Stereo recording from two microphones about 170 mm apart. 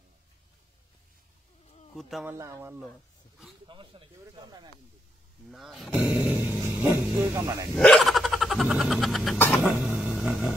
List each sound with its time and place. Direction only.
2.0 s speech: centre (ahead or behind)
2.2 s speech: 15° right (ahead or behind)
3.6 s speech: 30° right (ahead or behind)
5.5 s speech: centre (ahead or behind); by 7.6 s 20° right (ahead or behind)
7.7 s a sound: 5° left (ahead or behind)
9.7 s vehicle: 10° right (ahead or behind)